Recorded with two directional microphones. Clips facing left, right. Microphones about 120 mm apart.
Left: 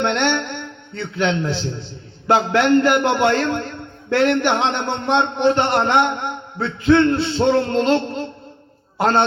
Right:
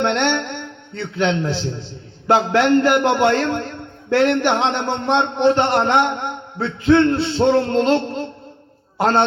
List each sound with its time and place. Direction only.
0.0 s a man's voice: 35° right (ahead or behind)